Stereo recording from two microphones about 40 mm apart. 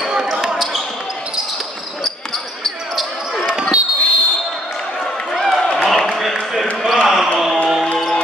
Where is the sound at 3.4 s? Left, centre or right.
Centre.